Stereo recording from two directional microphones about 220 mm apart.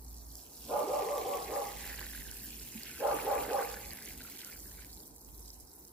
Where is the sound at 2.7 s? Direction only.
5° left (ahead or behind).